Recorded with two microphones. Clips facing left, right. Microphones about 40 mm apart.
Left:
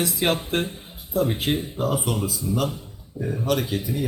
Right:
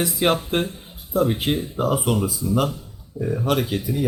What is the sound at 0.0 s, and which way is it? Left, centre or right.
A man's voice, centre.